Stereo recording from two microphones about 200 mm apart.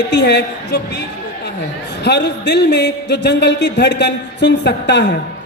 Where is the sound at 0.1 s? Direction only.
60° left (ahead or behind).